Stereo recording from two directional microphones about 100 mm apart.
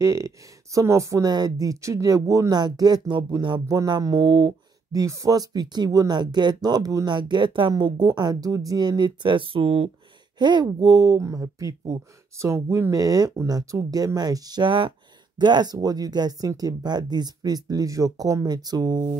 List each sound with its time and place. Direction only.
0.0 s speech: 30° right (ahead or behind)
4.2 s speech: 60° right (ahead or behind)
4.9 s speech: 35° right (ahead or behind)
7.2 s speech: 50° right (ahead or behind); by 9.8 s 70° right (ahead or behind)
10.4 s speech: 45° right (ahead or behind)